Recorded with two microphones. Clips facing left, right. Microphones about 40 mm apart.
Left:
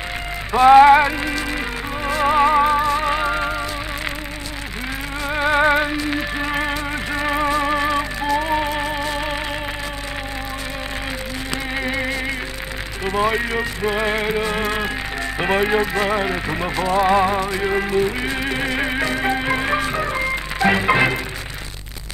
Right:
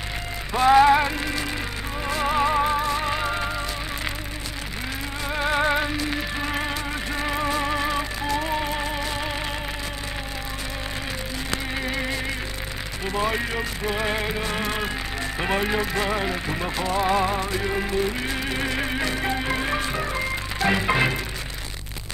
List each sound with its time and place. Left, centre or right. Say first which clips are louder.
0.5 s music: left 6 dB; left
5.2 s music: left 6 dB; centre
11.7 s music: left 7 dB; centre
15.3 s speech: left 6 dB; centre
20.6 s music: left 5 dB; centre